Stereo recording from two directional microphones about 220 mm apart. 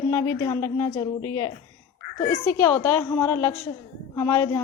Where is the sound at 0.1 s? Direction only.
15° left (ahead or behind).